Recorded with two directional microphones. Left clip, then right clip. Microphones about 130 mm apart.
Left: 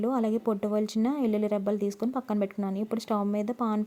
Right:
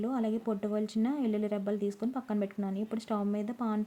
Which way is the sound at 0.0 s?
40° left (ahead or behind).